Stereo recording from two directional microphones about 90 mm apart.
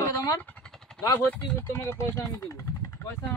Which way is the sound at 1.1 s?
25° left (ahead or behind).